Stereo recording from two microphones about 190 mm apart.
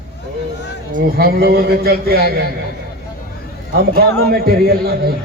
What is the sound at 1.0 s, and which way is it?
A man's voice, 55° right (ahead or behind).